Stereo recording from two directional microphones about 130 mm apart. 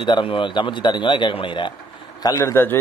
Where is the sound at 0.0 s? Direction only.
40° left (ahead or behind).